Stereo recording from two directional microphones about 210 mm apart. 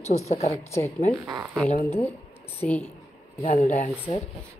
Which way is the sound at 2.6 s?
5° left (ahead or behind).